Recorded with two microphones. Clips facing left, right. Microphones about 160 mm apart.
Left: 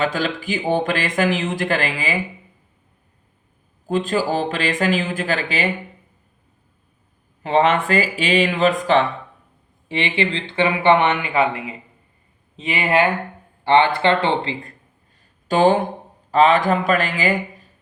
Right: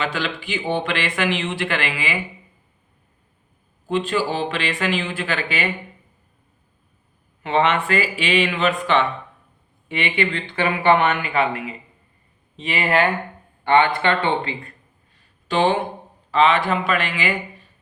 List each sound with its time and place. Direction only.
0.0 s speech: 45° left (ahead or behind)
3.8 s speech: 45° left (ahead or behind)
7.4 s speech: 40° left (ahead or behind)
15.4 s speech: 45° left (ahead or behind)